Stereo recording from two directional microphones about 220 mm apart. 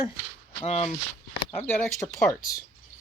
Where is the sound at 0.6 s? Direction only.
30° left (ahead or behind).